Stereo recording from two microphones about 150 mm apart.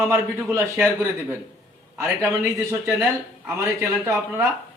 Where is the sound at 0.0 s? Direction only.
15° right (ahead or behind).